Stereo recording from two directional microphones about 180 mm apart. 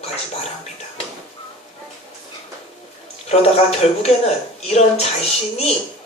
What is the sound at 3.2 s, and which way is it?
Speech, 35° left (ahead or behind).